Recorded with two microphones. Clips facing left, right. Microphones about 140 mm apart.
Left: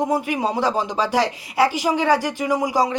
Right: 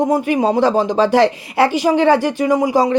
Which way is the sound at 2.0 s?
25° right (ahead or behind).